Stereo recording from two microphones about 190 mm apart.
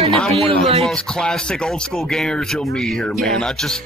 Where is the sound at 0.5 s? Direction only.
30° right (ahead or behind).